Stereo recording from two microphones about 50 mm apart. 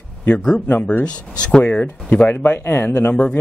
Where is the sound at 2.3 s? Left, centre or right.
Left.